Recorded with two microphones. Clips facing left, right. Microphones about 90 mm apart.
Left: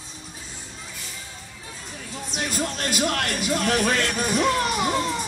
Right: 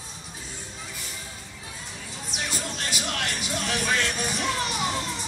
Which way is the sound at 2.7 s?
50° left (ahead or behind).